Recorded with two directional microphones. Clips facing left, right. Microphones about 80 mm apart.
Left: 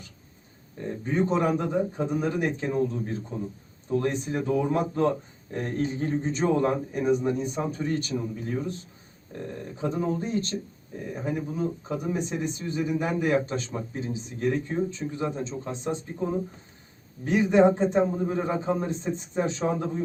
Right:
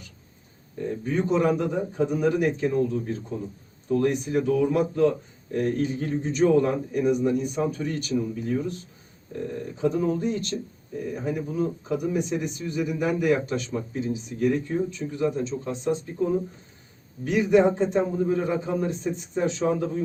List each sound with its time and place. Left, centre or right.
1.0 s a man's voice: left
9.8 s speech: left